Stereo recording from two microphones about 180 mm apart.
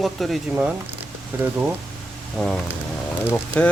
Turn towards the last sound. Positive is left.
turn(degrees=10)  # may be behind; listen again after turning